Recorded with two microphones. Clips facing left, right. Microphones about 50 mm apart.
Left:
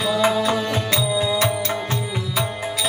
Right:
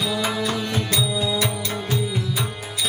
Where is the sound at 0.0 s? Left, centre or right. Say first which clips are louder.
Left 5 dB; left.